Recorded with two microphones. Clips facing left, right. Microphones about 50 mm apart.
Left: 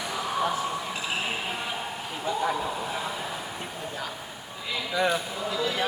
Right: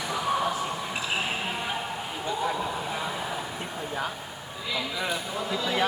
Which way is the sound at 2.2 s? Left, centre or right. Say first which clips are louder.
Left 2 dB; centre.